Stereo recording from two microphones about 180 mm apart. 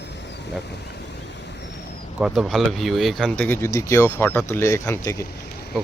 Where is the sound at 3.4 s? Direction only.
15° left (ahead or behind).